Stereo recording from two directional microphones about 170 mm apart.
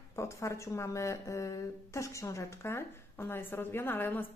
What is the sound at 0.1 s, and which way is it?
Speech, 15° left (ahead or behind).